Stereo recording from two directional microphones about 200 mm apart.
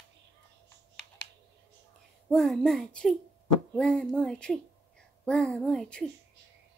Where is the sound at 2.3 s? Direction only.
Centre (ahead or behind).